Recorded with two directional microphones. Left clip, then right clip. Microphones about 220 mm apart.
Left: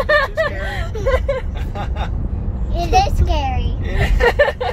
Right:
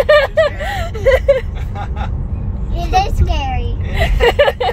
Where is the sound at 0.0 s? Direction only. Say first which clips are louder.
Right 5 dB; 55° right (ahead or behind).